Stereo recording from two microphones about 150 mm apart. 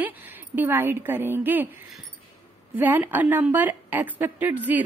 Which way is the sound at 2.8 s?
10° right (ahead or behind).